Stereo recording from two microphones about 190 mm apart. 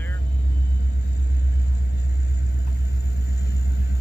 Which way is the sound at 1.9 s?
60° left (ahead or behind).